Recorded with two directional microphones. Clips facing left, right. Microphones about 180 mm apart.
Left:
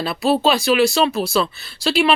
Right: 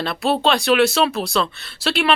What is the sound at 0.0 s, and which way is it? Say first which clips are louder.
Speech: left 2 dB; 5° left (ahead or behind).